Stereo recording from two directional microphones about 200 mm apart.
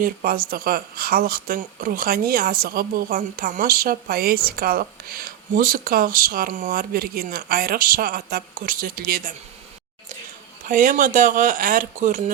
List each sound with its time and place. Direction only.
0.0 s speech: 45° right (ahead or behind)
10.7 s speech: 40° right (ahead or behind)